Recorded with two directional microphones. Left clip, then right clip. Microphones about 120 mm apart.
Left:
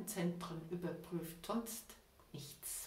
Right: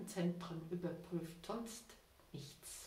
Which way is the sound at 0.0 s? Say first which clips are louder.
Left 1 dB; 5° right (ahead or behind).